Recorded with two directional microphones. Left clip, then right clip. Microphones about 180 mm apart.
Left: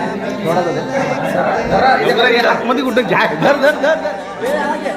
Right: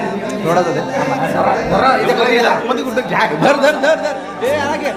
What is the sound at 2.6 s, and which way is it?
Speech, 40° left (ahead or behind).